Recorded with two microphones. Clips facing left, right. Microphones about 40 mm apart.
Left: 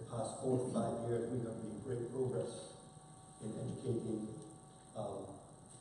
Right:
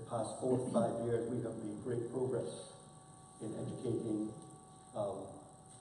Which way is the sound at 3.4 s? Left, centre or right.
Centre.